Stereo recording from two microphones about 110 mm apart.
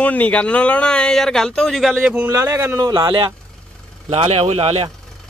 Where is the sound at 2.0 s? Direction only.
15° right (ahead or behind).